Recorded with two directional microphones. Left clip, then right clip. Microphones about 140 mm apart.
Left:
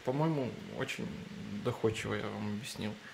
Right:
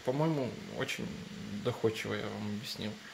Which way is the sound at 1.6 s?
10° left (ahead or behind).